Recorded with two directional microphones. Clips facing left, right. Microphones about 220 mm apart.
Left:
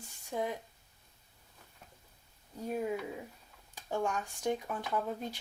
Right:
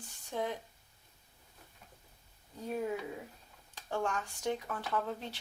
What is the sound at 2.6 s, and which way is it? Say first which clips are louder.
Speech: left 1 dB; 10° left (ahead or behind).